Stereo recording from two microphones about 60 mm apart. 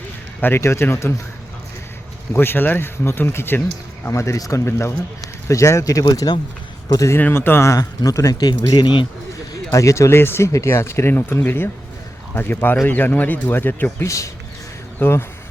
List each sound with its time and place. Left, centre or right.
0.4 s speech: left
2.3 s speech: left
4.1 s a man's voice: left
4.4 s speech: left
4.6 s speech: left
5.5 s a man's voice: left
7.2 s speech: left
7.7 s speech: left
8.3 s speech: left
9.7 s speech: left
11.1 s speech: left
14.0 s a man's voice: left
14.9 s speech: left